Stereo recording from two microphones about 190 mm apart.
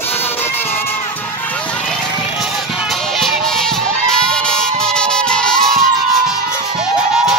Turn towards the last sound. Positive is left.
turn(degrees=5)  # may be behind; listen again after turning